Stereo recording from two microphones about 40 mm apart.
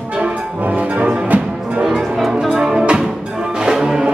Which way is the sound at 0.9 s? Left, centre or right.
Right.